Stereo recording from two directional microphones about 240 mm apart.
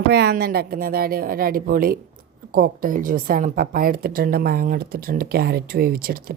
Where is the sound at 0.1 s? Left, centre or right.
Right.